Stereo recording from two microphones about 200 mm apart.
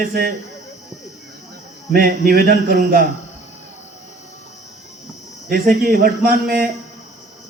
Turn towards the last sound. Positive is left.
turn(degrees=-50)  # may be behind; listen again after turning